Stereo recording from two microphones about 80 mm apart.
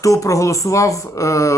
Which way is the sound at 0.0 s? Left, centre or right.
Left.